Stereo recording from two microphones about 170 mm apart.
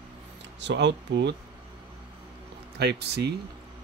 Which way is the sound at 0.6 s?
90° right.